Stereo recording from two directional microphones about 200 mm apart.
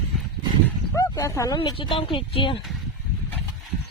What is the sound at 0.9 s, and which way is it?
Speech, 15° left (ahead or behind).